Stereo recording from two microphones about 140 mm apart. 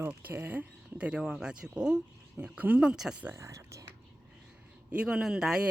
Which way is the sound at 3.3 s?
20° right (ahead or behind).